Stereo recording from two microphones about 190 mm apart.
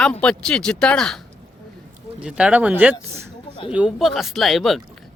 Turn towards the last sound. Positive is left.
turn(degrees=0)  # may be behind; listen again after turning